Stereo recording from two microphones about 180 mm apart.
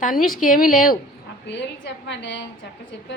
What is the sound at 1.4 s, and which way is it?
Speech, 75° left (ahead or behind).